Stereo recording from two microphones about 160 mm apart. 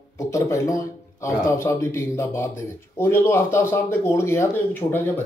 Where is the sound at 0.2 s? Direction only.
20° left (ahead or behind).